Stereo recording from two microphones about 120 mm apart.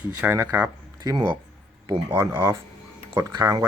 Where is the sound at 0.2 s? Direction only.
15° right (ahead or behind).